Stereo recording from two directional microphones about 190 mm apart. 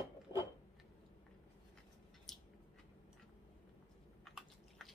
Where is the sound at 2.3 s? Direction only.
Centre (ahead or behind).